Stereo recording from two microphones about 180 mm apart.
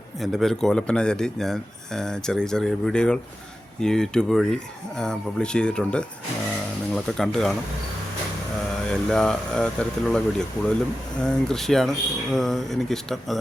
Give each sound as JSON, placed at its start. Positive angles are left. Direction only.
{"t": 0.2, "sound": "speech", "side_deg": 0}
{"t": 8.9, "sound": "speech", "side_deg": 5}